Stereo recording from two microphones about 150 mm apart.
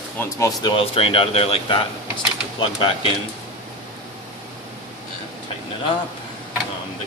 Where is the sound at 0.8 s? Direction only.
40° left (ahead or behind).